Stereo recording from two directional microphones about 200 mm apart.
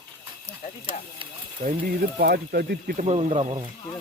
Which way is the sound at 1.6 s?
40° right (ahead or behind).